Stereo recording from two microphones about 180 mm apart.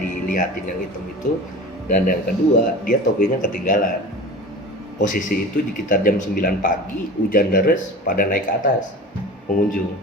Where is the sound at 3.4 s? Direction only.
45° left (ahead or behind).